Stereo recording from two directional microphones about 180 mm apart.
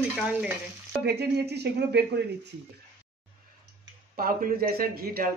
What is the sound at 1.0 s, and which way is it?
Speech, 65° right (ahead or behind).